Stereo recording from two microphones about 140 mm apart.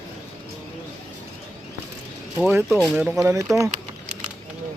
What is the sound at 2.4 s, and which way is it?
Speech, 15° right (ahead or behind).